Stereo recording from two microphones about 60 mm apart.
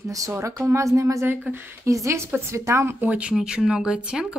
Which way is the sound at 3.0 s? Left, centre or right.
Right.